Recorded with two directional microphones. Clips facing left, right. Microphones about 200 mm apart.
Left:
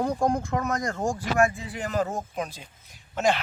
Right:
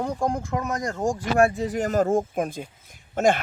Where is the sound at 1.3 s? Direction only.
35° right (ahead or behind).